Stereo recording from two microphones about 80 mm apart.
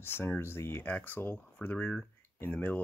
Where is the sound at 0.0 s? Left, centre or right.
Left.